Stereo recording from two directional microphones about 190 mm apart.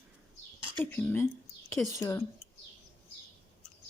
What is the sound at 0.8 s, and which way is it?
Speech, 10° left (ahead or behind).